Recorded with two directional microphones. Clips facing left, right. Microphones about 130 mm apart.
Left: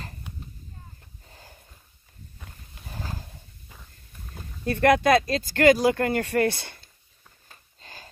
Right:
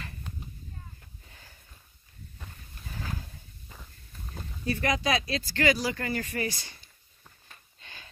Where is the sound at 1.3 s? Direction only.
40° left (ahead or behind).